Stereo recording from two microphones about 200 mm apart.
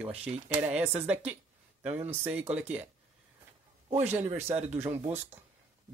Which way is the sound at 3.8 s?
10° right (ahead or behind).